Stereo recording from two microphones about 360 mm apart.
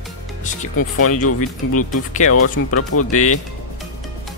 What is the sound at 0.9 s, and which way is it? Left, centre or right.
Speech, left.